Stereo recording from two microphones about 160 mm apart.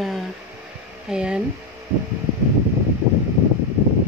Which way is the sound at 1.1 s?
5° right (ahead or behind).